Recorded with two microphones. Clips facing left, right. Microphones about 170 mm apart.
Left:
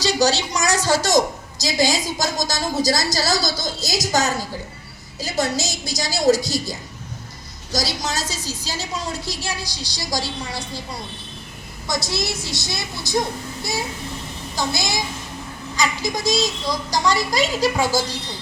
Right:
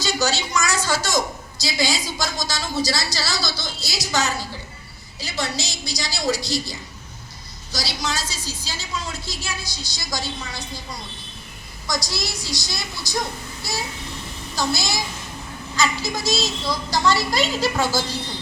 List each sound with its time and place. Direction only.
0.0 s a woman's voice: 35° left (ahead or behind)
11.9 s a woman's voice: 25° left (ahead or behind)
14.5 s a woman's voice: 20° left (ahead or behind)